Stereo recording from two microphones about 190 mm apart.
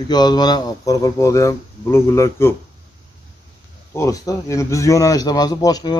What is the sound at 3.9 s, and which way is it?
A man's voice, 15° left (ahead or behind).